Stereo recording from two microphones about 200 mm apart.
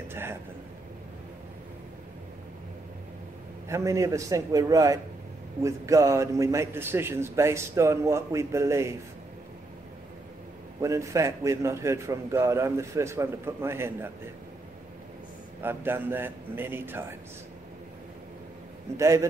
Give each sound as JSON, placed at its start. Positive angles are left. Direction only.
{"t": 0.1, "sound": "speech", "side_deg": -10}
{"t": 3.6, "sound": "a man's voice", "side_deg": -15}
{"t": 10.8, "sound": "a man's voice", "side_deg": -15}
{"t": 15.6, "sound": "a man's voice", "side_deg": -10}
{"t": 18.9, "sound": "a man's voice", "side_deg": -15}